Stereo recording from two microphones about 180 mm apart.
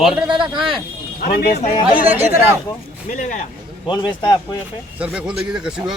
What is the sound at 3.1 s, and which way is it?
Speech, 45° left (ahead or behind).